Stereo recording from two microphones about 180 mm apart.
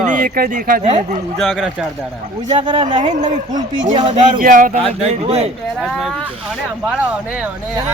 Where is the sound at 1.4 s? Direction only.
Centre (ahead or behind).